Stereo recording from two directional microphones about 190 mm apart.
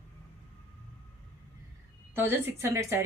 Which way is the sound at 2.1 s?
10° right (ahead or behind).